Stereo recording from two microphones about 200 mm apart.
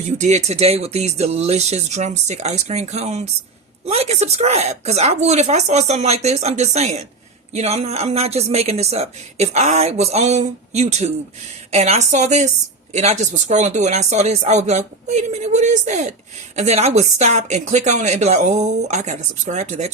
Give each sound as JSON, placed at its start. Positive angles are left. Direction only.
{"t": 0.2, "sound": "a woman's voice", "side_deg": -35}